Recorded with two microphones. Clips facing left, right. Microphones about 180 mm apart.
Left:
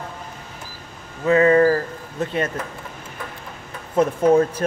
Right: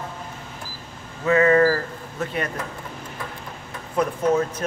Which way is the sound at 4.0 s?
30° left (ahead or behind).